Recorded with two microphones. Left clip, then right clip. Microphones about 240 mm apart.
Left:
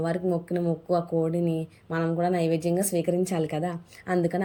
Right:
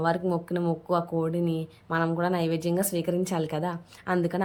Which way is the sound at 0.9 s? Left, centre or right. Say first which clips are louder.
Left 2 dB; centre.